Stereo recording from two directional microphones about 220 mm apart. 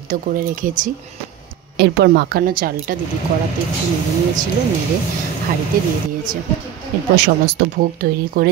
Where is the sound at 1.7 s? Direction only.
50° right (ahead or behind).